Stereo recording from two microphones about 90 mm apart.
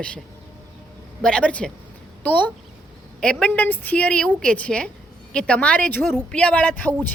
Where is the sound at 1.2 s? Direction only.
10° left (ahead or behind).